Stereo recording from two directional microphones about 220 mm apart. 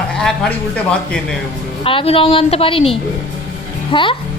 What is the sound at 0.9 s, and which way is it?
Speech, 5° left (ahead or behind).